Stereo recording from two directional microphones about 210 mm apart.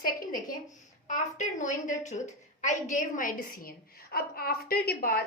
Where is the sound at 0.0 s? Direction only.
40° left (ahead or behind).